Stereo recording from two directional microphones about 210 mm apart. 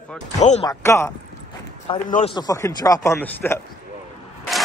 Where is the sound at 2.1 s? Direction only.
35° left (ahead or behind).